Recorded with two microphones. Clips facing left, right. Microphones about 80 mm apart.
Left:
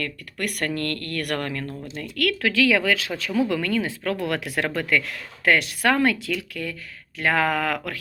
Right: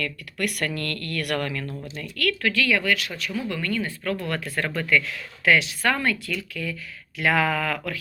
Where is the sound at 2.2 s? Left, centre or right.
Left.